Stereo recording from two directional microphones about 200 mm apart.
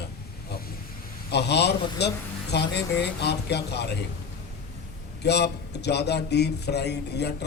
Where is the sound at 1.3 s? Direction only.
55° left (ahead or behind).